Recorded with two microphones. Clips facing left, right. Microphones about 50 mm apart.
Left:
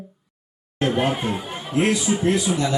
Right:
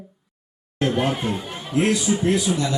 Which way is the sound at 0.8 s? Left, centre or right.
Centre.